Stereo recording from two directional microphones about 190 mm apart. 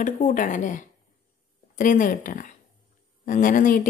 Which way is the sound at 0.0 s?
45° left (ahead or behind).